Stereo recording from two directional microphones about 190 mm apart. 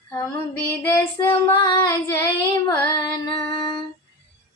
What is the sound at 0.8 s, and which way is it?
Female singing, 10° left (ahead or behind).